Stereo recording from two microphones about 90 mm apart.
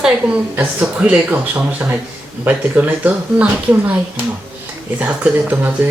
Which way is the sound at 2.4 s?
20° right (ahead or behind).